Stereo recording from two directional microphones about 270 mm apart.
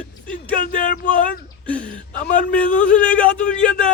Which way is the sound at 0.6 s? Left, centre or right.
Left.